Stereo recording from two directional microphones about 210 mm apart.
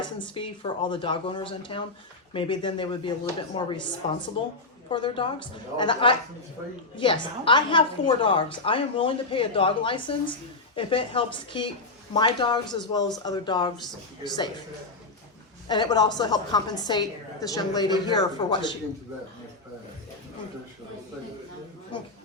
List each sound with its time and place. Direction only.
0.0 s a woman's voice: 25° left (ahead or behind)
15.6 s a woman's voice: 20° left (ahead or behind)